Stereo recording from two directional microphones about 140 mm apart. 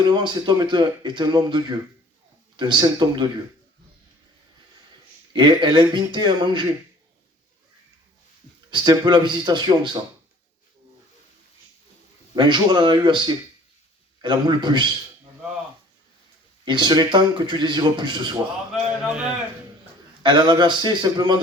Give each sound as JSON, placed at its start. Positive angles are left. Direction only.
{"t": 0.1, "sound": "speech", "side_deg": -35}
{"t": 5.3, "sound": "speech", "side_deg": -35}
{"t": 8.7, "sound": "speech", "side_deg": -30}
{"t": 12.4, "sound": "speech", "side_deg": -35}
{"t": 16.6, "sound": "speech", "side_deg": -30}
{"t": 19.0, "sound": "a man's voice", "side_deg": -5}
{"t": 20.2, "sound": "speech", "side_deg": -35}